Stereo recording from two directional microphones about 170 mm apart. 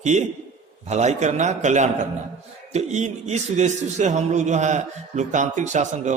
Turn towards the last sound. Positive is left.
turn(degrees=-45)  # may be behind; listen again after turning